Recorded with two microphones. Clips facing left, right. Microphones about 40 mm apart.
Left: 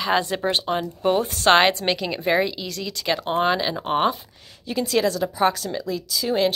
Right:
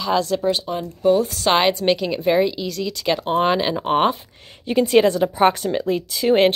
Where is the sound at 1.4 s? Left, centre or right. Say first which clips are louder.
Left 2 dB; centre.